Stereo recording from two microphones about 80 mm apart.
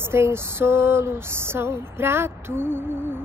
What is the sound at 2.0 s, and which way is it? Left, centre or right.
Speech, right.